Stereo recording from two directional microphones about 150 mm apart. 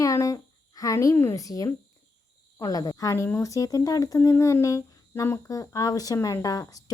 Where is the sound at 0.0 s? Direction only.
20° left (ahead or behind).